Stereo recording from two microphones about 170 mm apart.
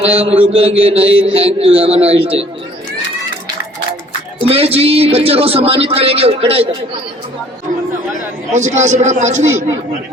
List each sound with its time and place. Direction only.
0.0 s a man's voice: 35° right (ahead or behind)
4.4 s a man's voice: 35° right (ahead or behind)
8.5 s a man's voice: 45° right (ahead or behind)